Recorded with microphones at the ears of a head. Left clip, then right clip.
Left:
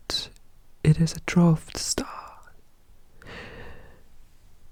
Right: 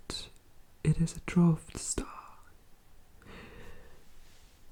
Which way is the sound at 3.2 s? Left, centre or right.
Left.